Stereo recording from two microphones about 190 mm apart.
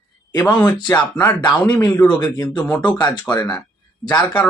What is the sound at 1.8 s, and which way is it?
A man's voice, 20° left (ahead or behind).